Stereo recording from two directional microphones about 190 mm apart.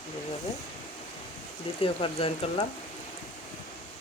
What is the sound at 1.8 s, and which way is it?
Speech, 30° left (ahead or behind).